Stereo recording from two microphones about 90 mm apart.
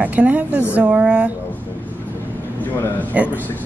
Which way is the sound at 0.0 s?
15° right (ahead or behind).